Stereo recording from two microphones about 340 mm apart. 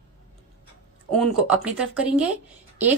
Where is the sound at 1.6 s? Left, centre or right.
Centre.